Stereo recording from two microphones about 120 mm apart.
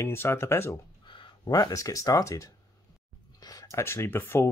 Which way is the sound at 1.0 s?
45° left (ahead or behind).